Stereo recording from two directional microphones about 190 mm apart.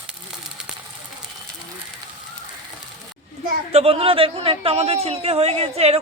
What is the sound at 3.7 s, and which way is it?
A man's voice, 30° right (ahead or behind).